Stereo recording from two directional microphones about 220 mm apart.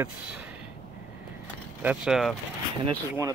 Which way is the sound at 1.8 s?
5° right (ahead or behind).